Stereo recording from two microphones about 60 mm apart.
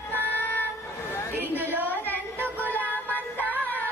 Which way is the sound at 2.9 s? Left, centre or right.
Left.